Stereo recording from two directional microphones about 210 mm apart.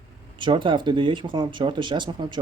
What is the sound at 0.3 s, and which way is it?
Speech, 20° right (ahead or behind).